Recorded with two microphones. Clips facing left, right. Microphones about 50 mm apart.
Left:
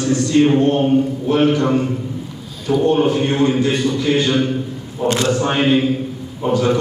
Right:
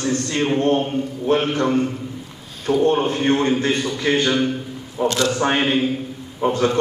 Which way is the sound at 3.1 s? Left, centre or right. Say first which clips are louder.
Left 2 dB; right.